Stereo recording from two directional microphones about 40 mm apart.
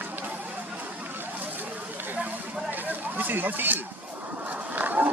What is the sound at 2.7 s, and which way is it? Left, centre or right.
Chatter, right.